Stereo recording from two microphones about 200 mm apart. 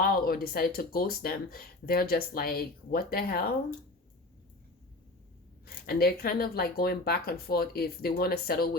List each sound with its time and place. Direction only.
0.0 s speech: 50° left (ahead or behind)
5.6 s speech: 50° left (ahead or behind)